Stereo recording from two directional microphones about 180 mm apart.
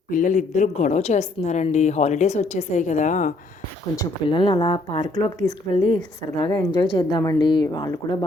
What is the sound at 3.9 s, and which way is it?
Speech, 25° left (ahead or behind).